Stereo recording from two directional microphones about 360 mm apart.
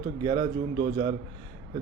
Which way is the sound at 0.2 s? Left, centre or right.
Centre.